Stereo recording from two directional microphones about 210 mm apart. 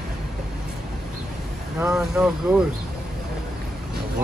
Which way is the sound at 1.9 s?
5° right (ahead or behind).